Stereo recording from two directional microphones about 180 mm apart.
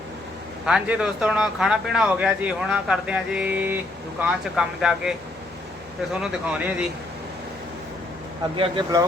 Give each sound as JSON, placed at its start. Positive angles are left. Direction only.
{"t": 0.6, "sound": "speech", "side_deg": -5}
{"t": 6.2, "sound": "speech", "side_deg": -5}
{"t": 8.5, "sound": "speech", "side_deg": -30}